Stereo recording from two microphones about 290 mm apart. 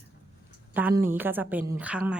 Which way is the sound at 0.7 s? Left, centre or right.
Centre.